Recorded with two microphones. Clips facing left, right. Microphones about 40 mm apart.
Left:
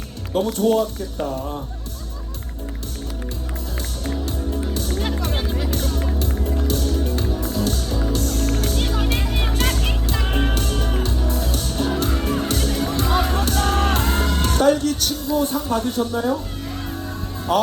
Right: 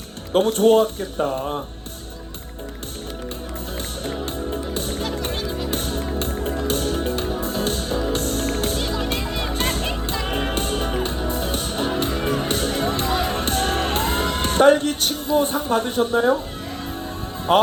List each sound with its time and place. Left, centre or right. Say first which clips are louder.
0.3 s speech: right 3 dB; right
4.7 s music: left 1 dB; right
10.2 s music: left 2 dB; centre
10.5 s music: right 1 dB; right
17.5 s speech: right 3 dB; right